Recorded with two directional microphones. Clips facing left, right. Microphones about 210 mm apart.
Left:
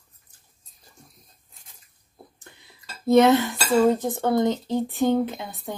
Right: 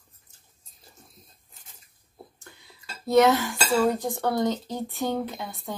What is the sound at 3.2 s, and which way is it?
Speech, 20° left (ahead or behind).